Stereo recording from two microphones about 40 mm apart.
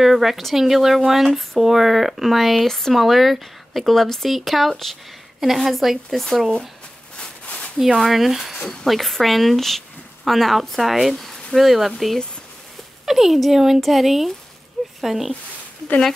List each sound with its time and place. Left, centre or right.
0.0 s speech: centre
6.0 s speech: centre
8.0 s speech: centre